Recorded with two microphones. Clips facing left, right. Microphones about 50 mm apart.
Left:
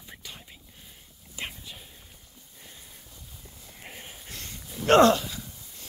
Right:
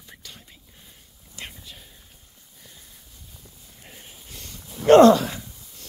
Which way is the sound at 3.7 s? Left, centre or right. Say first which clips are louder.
Left 4 dB; left.